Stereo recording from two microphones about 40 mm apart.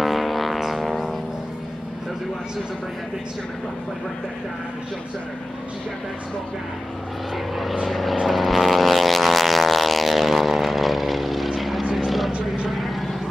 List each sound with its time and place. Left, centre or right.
0.0 s vehicle: centre
0.6 s music: centre
7.8 s vehicle: centre
12.3 s vehicle: right
12.6 s vehicle: centre